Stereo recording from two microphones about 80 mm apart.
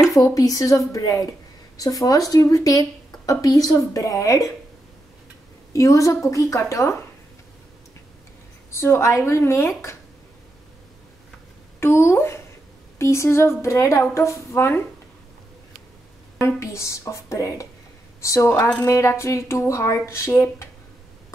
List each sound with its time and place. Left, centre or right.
0.1 s a woman's voice: left
5.7 s a woman's voice: left
8.7 s speech: left
11.8 s speech: left
16.3 s speech: left